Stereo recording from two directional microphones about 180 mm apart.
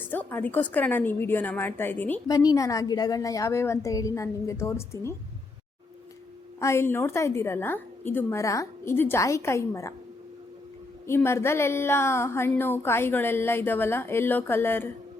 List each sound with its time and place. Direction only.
0.0 s a woman's voice: 10° left (ahead or behind)
2.2 s a woman's voice: 20° left (ahead or behind)
6.6 s a woman's voice: 15° left (ahead or behind)
11.0 s a woman's voice: 15° left (ahead or behind)